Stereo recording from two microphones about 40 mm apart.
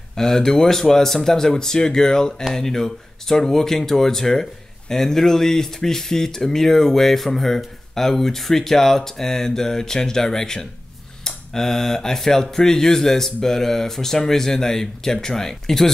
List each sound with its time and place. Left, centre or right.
0.1 s speech: centre